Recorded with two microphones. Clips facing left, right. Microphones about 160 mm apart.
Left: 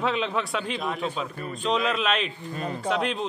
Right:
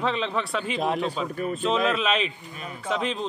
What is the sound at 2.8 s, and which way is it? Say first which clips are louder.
Speech: even; centre (ahead or behind).